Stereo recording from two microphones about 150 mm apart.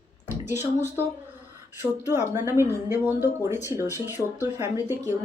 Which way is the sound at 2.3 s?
15° right (ahead or behind).